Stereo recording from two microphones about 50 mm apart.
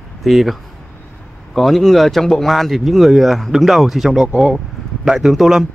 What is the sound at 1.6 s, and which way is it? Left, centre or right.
Speech, centre.